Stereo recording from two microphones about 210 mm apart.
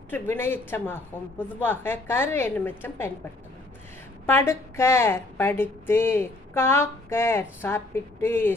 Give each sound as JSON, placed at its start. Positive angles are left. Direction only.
{"t": 0.1, "sound": "a woman's voice", "side_deg": 10}
{"t": 4.3, "sound": "a woman's voice", "side_deg": 10}